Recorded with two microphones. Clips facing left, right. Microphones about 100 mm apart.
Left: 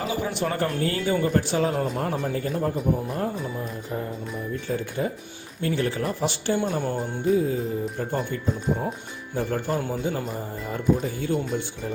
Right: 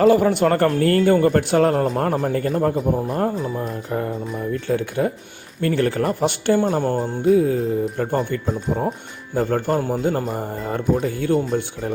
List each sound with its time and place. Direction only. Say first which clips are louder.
0.0 s speech: right 12 dB; 65° right (ahead or behind)
4.7 s speech: right 6 dB; 70° right (ahead or behind)
6.6 s music: right 6 dB; 40° right (ahead or behind)
7.3 s speech: right 6 dB; 70° right (ahead or behind)